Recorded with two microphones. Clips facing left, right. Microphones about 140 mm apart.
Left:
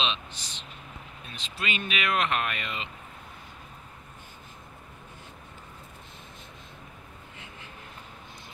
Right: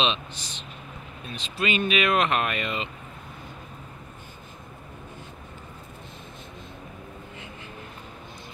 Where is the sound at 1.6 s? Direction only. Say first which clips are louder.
Right 8 dB; 15° right (ahead or behind).